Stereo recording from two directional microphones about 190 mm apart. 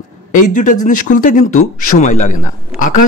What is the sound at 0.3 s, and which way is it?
A man's voice, 45° left (ahead or behind).